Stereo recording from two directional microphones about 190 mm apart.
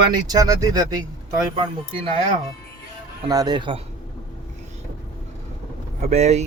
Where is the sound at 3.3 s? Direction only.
20° right (ahead or behind).